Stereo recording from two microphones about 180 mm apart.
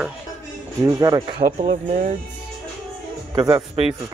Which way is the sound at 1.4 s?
40° right (ahead or behind).